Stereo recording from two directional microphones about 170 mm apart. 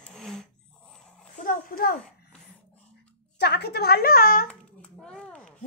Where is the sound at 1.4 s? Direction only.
55° left (ahead or behind).